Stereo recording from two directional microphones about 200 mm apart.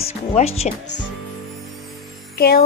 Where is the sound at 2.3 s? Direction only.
50° left (ahead or behind).